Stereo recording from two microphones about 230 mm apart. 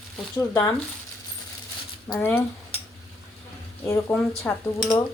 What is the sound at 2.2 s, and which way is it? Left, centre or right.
Speech, centre.